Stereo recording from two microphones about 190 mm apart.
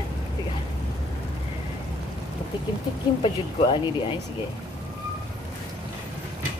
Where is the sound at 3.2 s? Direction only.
25° left (ahead or behind).